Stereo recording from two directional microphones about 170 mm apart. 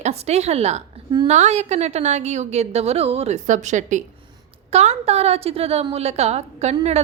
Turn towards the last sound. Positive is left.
turn(degrees=-40)  # may be behind; listen again after turning